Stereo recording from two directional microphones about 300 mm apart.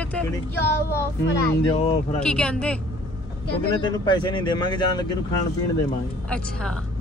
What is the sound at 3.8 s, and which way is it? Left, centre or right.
Speech, centre.